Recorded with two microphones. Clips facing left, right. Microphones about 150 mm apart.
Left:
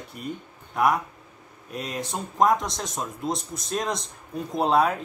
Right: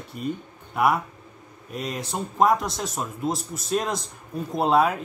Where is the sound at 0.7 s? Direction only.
5° right (ahead or behind).